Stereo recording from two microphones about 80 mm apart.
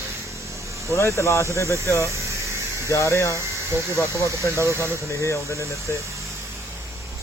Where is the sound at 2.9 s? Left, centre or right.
Left.